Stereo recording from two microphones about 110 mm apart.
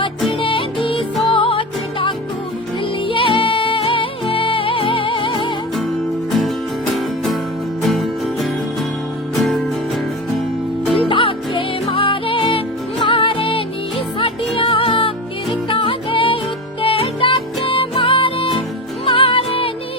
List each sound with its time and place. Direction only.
0.3 s music: 55° left (ahead or behind)
7.8 s music: centre (ahead or behind)
10.9 s music: 55° left (ahead or behind)